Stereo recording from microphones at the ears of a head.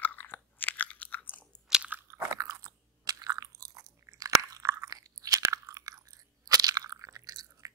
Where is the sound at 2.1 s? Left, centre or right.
Right.